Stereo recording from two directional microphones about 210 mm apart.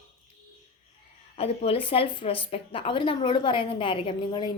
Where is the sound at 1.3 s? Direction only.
30° left (ahead or behind).